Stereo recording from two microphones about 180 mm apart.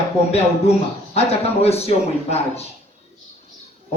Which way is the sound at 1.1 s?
35° left (ahead or behind).